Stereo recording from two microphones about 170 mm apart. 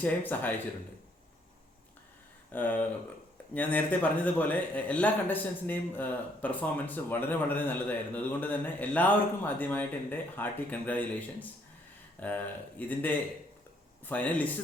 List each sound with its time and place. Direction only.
0.0 s a man's voice: 10° left (ahead or behind)
2.5 s a man's voice: 10° left (ahead or behind)